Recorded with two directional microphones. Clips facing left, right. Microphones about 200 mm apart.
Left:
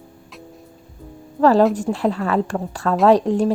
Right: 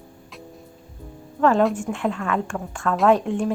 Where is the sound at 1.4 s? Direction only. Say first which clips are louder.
Left 4 dB; 35° left (ahead or behind).